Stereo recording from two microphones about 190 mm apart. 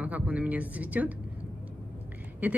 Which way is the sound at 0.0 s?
10° right (ahead or behind).